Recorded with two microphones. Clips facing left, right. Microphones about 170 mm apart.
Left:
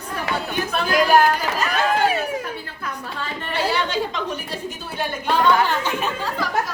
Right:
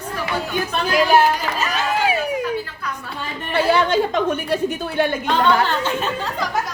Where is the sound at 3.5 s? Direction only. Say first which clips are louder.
Right 6 dB; 55° right (ahead or behind).